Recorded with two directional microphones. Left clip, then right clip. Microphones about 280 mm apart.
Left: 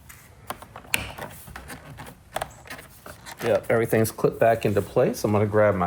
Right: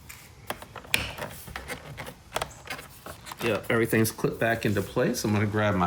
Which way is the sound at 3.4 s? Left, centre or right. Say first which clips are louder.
Left 4 dB; centre.